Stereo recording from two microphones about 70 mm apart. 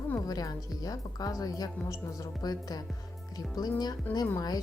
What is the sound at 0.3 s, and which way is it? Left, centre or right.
A woman's voice, left.